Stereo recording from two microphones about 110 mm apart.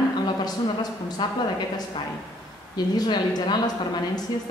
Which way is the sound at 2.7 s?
40° left (ahead or behind).